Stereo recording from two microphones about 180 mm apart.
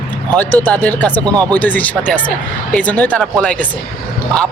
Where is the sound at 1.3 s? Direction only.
20° right (ahead or behind).